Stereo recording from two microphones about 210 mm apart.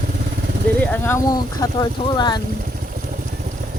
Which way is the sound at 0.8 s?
10° left (ahead or behind).